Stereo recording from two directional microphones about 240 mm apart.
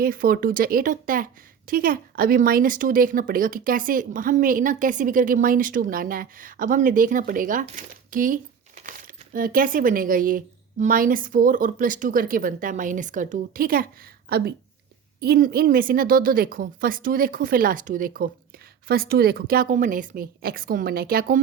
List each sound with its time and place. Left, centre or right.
0.0 s a woman's voice: right